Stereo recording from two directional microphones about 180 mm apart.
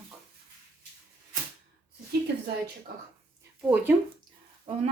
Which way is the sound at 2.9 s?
55° right (ahead or behind).